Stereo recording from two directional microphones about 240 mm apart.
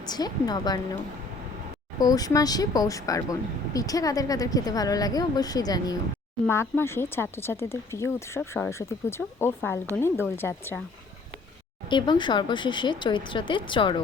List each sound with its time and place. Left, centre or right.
0.1 s speech: centre
2.0 s speech: centre
11.9 s speech: centre